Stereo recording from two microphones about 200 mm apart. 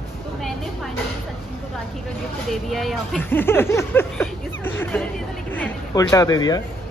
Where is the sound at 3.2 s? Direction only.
10° left (ahead or behind).